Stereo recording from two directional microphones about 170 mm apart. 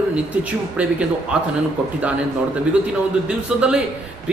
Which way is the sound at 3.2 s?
5° right (ahead or behind).